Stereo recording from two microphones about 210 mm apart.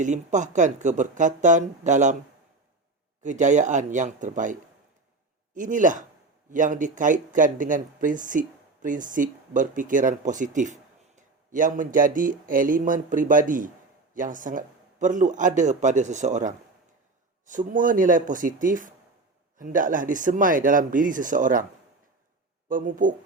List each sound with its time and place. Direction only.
0.0 s speech: 35° right (ahead or behind)
3.2 s speech: 35° right (ahead or behind)
5.5 s speech: 40° right (ahead or behind)
22.7 s speech: 40° right (ahead or behind)